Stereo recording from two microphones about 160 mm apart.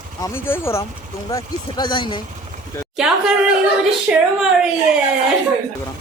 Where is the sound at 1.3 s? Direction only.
25° left (ahead or behind).